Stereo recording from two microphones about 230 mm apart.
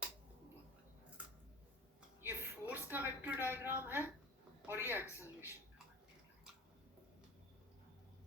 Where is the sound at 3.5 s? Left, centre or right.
Centre.